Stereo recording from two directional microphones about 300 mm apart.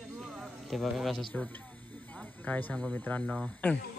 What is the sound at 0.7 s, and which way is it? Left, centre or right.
Speech, centre.